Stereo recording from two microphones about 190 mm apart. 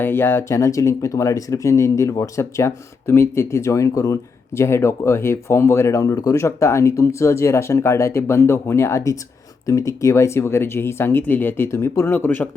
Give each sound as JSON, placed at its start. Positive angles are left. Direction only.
{"t": 0.0, "sound": "speech", "side_deg": 10}